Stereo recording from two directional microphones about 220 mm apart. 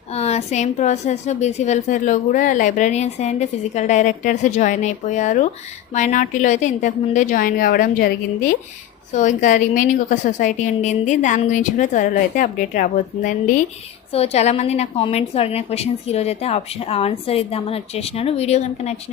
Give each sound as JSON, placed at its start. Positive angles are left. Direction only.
{"t": 0.1, "sound": "a woman's voice", "side_deg": 30}